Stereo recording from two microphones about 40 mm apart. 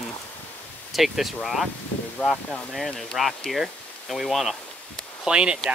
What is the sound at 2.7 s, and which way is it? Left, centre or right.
Speech, centre.